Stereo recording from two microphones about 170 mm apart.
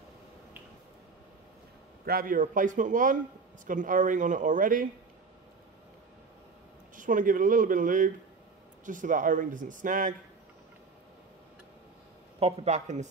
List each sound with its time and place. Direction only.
2.0 s speech: 60° right (ahead or behind)
7.0 s speech: 50° right (ahead or behind)
12.4 s speech: 40° right (ahead or behind)